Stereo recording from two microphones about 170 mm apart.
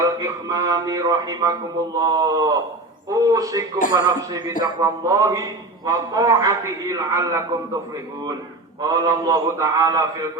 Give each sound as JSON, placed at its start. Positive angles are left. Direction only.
{"t": 0.0, "sound": "a man's voice", "side_deg": -20}
{"t": 8.8, "sound": "a man's voice", "side_deg": -20}